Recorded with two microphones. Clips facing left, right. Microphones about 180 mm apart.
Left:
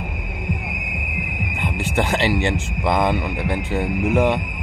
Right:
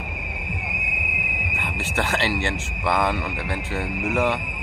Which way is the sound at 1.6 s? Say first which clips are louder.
Left 5 dB; 15° left (ahead or behind).